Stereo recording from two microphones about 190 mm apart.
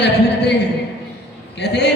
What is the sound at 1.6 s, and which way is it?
Speech, 65° left (ahead or behind).